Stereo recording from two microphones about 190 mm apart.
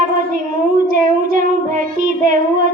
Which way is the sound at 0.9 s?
45° right (ahead or behind).